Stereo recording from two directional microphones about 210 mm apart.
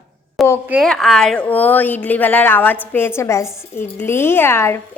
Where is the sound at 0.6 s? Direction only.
Centre (ahead or behind).